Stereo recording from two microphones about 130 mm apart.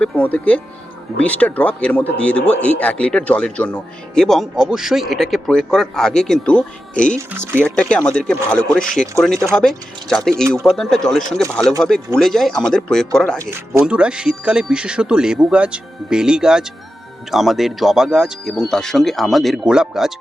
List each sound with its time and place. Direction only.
0.0 s speech: 10° left (ahead or behind)
7.3 s speech: 15° right (ahead or behind)
7.6 s speech: 10° left (ahead or behind)
13.8 s speech: 5° right (ahead or behind)